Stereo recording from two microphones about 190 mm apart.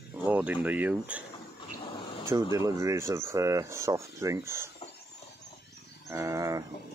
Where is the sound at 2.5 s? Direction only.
15° right (ahead or behind).